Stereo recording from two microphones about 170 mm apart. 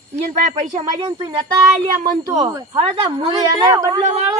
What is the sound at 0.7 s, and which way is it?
A woman's voice, 25° right (ahead or behind).